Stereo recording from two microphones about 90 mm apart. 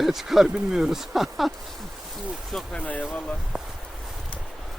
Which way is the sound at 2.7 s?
15° left (ahead or behind).